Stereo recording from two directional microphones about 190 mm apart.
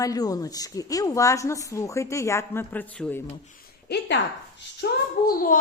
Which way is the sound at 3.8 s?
60° left (ahead or behind).